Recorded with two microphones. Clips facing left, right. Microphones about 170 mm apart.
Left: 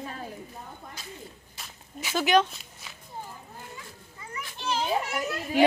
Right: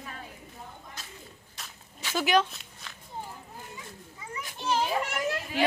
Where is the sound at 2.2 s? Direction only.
5° right (ahead or behind).